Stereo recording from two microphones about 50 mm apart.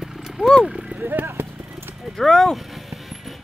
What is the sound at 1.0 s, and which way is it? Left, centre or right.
Clip-clop, right.